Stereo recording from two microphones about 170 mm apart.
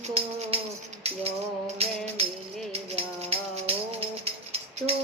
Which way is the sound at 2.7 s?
35° right (ahead or behind).